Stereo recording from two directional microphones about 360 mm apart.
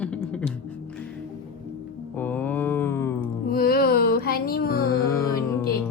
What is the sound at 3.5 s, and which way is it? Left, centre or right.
Music, left.